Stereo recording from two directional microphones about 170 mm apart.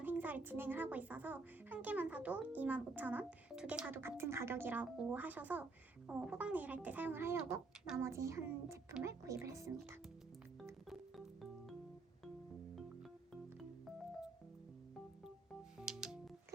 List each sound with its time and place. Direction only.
0.0 s speech: 10° right (ahead or behind)
10.8 s music: centre (ahead or behind)
13.3 s music: centre (ahead or behind)
15.8 s music: 5° right (ahead or behind)